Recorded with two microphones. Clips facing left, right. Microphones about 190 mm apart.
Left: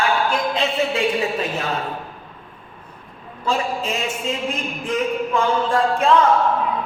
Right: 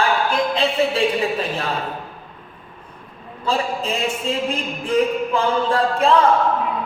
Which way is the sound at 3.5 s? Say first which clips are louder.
Even; 30° right (ahead or behind).